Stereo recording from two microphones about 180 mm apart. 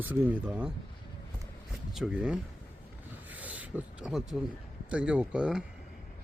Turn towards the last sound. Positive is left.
turn(degrees=-5)  # may be behind; listen again after turning